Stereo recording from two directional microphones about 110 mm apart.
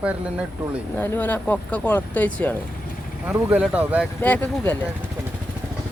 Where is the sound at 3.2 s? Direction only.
15° right (ahead or behind).